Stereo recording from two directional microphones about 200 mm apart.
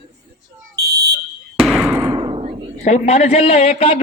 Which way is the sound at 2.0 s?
20° right (ahead or behind).